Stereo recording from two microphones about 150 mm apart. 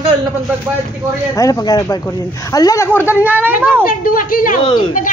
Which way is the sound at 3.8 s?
70° left (ahead or behind).